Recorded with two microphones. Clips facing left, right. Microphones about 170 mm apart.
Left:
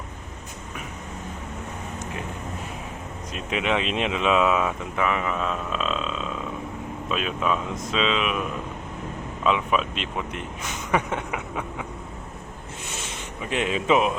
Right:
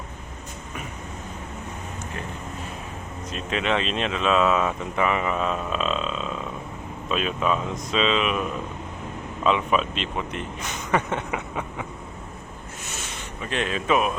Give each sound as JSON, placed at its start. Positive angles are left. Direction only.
{"t": 3.3, "sound": "speech", "side_deg": 10}
{"t": 13.4, "sound": "speech", "side_deg": 15}